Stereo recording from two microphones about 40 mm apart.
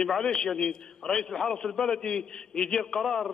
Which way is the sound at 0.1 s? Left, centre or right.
Centre.